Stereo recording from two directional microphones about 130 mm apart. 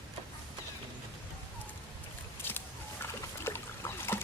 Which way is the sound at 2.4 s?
15° left (ahead or behind).